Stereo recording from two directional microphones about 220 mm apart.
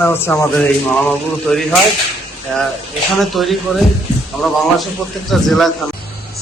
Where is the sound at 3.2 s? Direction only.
Centre (ahead or behind).